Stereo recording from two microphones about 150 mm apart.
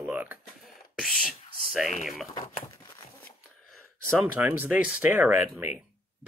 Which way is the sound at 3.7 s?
Centre (ahead or behind).